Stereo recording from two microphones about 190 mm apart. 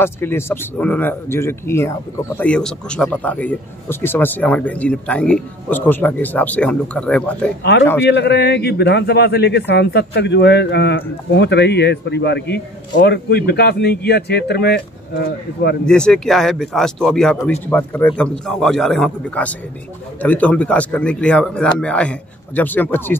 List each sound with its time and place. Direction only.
0.0 s speech: 10° left (ahead or behind)
8.1 s a man's voice: 65° left (ahead or behind)
15.8 s speech: 5° left (ahead or behind)